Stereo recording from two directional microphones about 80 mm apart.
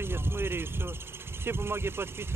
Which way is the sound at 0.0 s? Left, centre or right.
Right.